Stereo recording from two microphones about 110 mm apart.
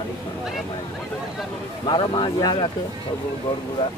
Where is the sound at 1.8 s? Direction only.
45° left (ahead or behind).